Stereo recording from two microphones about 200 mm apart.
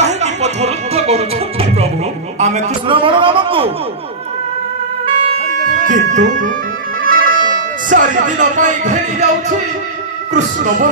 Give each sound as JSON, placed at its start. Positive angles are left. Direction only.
{"t": 0.0, "sound": "music", "side_deg": -35}
{"t": 2.4, "sound": "a man's voice", "side_deg": -30}
{"t": 5.9, "sound": "speech", "side_deg": -40}
{"t": 7.0, "sound": "music", "side_deg": -45}
{"t": 10.3, "sound": "speech", "side_deg": -40}